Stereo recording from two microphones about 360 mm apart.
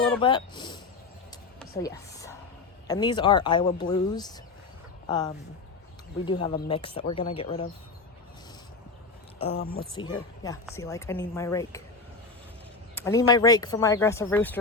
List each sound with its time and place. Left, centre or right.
0.2 s speech: centre
1.3 s a sound: centre
2.8 s speech: centre
6.4 s speech: centre
9.5 s speech: left
9.9 s speech: centre
13.0 s speech: centre